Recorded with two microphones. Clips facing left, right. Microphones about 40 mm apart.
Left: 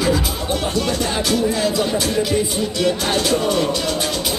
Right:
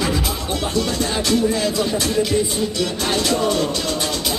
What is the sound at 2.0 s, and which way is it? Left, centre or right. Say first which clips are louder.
Speech: even; left.